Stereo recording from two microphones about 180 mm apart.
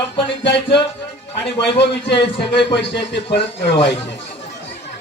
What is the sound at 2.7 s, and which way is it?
Speech, 75° left (ahead or behind).